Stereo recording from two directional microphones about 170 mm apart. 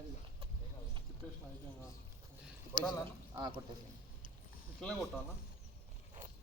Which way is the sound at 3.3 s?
25° right (ahead or behind).